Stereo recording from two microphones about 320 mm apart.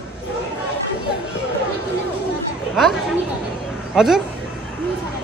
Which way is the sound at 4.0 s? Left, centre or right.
Centre.